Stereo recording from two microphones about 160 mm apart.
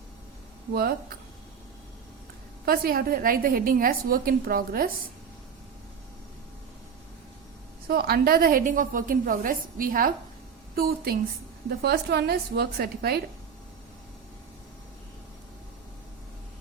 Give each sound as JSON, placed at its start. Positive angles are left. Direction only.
{"t": 0.7, "sound": "a woman's voice", "side_deg": -70}
{"t": 2.6, "sound": "a woman's voice", "side_deg": -65}
{"t": 7.9, "sound": "a woman's voice", "side_deg": -75}
{"t": 11.8, "sound": "a woman's voice", "side_deg": -90}